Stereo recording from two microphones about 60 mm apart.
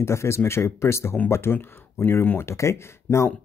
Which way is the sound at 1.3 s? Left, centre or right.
Left.